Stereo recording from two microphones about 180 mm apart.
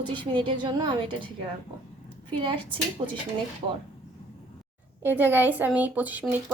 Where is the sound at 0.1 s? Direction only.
25° right (ahead or behind).